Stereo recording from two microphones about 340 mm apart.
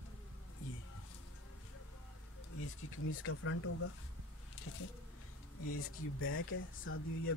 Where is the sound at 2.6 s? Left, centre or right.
Left.